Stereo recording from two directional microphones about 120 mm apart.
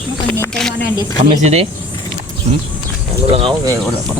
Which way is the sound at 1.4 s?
65° right (ahead or behind).